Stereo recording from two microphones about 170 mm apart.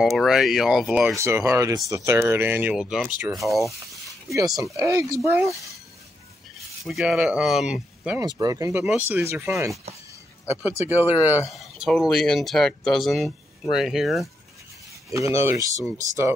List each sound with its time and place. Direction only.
0.0 s speech: centre (ahead or behind)
1.1 s speech: 15° right (ahead or behind); by 3.7 s centre (ahead or behind)
4.7 s speech: 20° right (ahead or behind)
6.9 s speech: centre (ahead or behind)
8.2 s speech: 20° right (ahead or behind)
8.8 s speech: 5° right (ahead or behind)
9.2 s speech: 15° right (ahead or behind)
11.0 s speech: 10° right (ahead or behind)
11.4 s speech: centre (ahead or behind)
15.0 s speech: 20° right (ahead or behind)